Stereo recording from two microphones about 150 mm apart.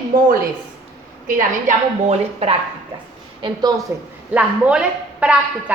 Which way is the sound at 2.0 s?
45° right (ahead or behind).